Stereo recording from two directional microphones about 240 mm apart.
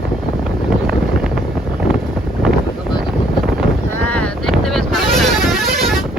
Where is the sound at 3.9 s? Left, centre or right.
Centre.